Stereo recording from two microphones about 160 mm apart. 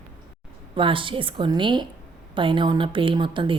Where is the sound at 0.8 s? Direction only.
30° right (ahead or behind).